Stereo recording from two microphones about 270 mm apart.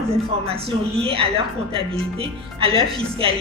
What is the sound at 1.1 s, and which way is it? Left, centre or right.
A woman's voice, right.